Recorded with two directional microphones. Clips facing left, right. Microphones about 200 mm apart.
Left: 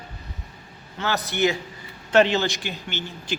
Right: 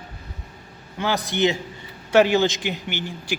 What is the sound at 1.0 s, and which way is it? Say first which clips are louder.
A man's voice: right 2 dB; 15° right (ahead or behind).